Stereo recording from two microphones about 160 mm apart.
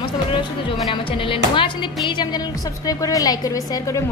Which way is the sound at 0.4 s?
35° left (ahead or behind).